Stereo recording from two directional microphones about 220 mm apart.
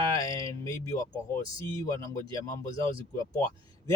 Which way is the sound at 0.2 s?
15° left (ahead or behind).